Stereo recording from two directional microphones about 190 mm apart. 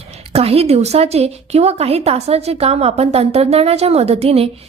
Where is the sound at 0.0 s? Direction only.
30° right (ahead or behind).